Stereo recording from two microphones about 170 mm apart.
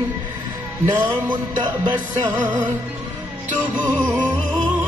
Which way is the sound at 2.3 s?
10° right (ahead or behind).